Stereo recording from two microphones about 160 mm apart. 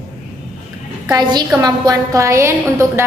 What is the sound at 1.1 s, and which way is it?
A woman's voice, 25° right (ahead or behind).